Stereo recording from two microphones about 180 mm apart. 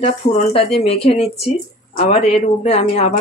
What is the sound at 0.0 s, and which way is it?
Speech, 35° left (ahead or behind).